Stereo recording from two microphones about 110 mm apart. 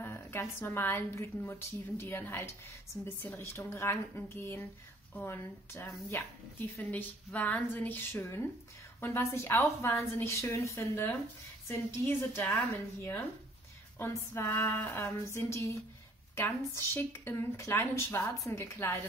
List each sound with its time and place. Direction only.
0.0 s speech: 20° left (ahead or behind)
13.9 s speech: 25° left (ahead or behind)